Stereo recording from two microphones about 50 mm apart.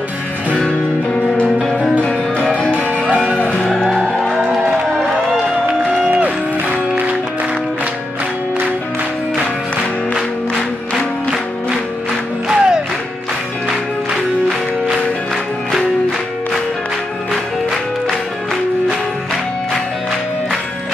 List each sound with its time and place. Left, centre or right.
0.6 s music: left
4.5 s music: centre
5.9 s music: right
12.4 s music: centre